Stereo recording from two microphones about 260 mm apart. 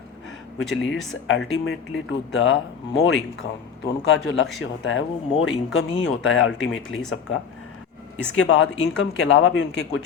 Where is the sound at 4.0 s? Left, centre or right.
Left.